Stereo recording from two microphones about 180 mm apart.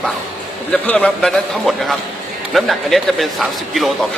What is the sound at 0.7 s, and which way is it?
A man's voice, 10° left (ahead or behind).